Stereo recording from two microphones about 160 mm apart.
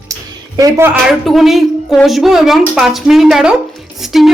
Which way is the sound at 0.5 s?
20° right (ahead or behind).